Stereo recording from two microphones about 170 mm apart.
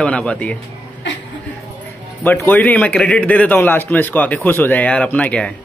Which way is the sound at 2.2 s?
10° left (ahead or behind).